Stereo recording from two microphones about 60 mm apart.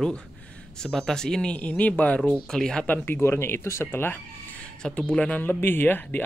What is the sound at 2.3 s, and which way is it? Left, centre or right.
Speech, centre.